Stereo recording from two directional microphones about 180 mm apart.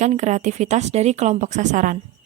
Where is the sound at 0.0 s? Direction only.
40° right (ahead or behind).